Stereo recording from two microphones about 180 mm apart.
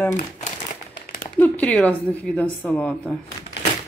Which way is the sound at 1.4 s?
10° left (ahead or behind).